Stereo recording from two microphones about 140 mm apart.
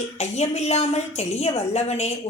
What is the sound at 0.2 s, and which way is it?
A woman's voice, 50° left (ahead or behind).